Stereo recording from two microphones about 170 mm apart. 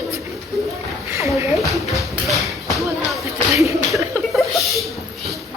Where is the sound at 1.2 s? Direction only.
20° right (ahead or behind).